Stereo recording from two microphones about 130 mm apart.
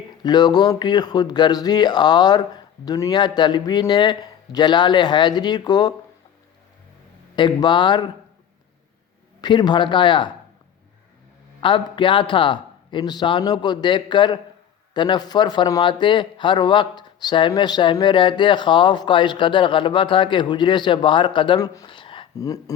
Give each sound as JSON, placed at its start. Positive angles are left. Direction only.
{"t": 0.2, "sound": "speech", "side_deg": 35}
{"t": 7.3, "sound": "speech", "side_deg": 35}
{"t": 9.4, "sound": "speech", "side_deg": 35}
{"t": 11.6, "sound": "speech", "side_deg": 40}
{"t": 22.4, "sound": "speech", "side_deg": 25}